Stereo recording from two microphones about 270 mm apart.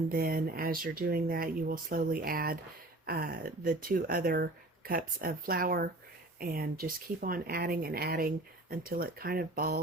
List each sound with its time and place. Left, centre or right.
0.1 s speech: right